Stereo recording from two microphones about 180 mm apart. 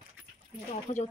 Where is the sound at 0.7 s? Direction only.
40° left (ahead or behind).